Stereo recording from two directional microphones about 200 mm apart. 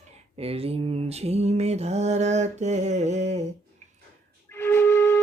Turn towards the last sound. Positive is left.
turn(degrees=10)  # may be behind; listen again after turning